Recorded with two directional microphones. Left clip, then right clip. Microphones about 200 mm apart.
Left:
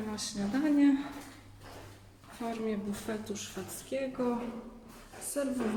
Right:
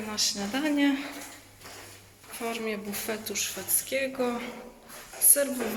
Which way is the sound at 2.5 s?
5° left (ahead or behind).